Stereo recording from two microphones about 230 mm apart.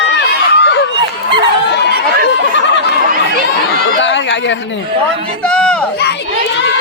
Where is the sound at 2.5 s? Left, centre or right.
Left.